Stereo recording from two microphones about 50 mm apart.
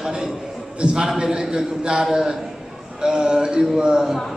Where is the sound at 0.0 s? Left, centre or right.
Centre.